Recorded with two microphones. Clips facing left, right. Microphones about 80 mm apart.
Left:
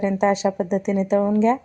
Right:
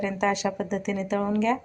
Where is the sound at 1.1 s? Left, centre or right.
Left.